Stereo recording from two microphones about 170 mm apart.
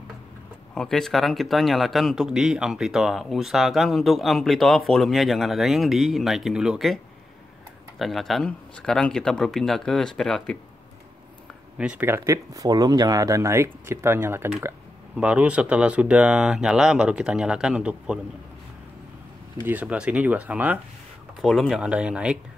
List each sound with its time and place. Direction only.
0.7 s speech: centre (ahead or behind)
8.0 s speech: centre (ahead or behind)
11.8 s speech: 10° right (ahead or behind)
19.6 s speech: 10° right (ahead or behind)